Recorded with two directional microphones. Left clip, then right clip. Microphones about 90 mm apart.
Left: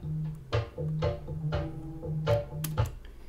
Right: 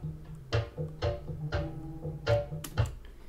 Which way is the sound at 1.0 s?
25° right (ahead or behind).